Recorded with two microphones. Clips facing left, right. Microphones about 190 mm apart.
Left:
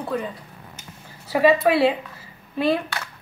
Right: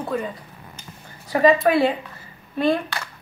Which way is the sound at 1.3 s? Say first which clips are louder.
Right 1 dB; 5° left (ahead or behind).